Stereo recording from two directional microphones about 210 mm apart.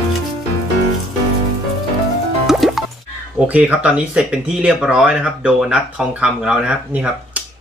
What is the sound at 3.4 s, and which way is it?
Speech, 5° right (ahead or behind).